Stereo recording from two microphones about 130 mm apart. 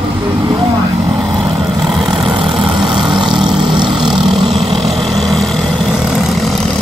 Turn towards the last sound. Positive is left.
turn(degrees=0)  # may be behind; listen again after turning